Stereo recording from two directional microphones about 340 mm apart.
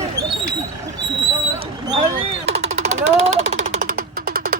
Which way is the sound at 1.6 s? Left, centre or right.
Centre.